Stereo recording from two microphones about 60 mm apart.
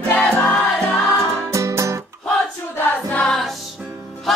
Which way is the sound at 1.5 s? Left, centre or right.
Right.